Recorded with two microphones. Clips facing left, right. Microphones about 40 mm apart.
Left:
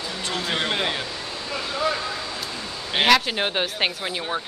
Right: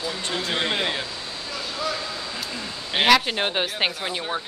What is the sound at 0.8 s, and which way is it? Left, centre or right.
Speech, centre.